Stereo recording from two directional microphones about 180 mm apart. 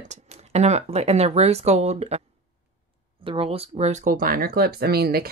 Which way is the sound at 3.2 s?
30° right (ahead or behind).